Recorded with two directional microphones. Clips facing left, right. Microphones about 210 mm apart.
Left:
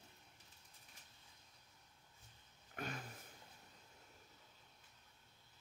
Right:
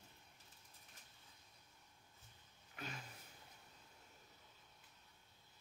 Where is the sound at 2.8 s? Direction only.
50° left (ahead or behind).